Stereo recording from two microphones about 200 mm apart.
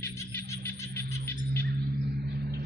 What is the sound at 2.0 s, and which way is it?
Cricket, 55° right (ahead or behind).